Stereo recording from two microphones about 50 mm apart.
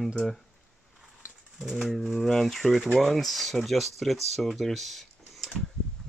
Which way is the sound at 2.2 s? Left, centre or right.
Centre.